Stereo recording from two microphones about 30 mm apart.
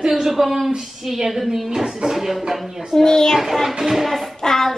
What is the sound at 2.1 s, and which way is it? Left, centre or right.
Music, centre.